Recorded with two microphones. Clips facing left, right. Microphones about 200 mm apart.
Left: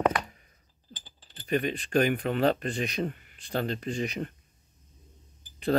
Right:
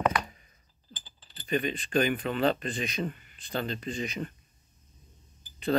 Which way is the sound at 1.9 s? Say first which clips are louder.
Left 2 dB; 60° left (ahead or behind).